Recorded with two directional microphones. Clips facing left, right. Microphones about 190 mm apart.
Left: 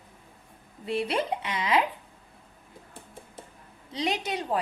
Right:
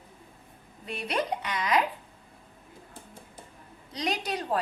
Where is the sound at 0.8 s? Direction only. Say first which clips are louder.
Left 3 dB; 25° left (ahead or behind).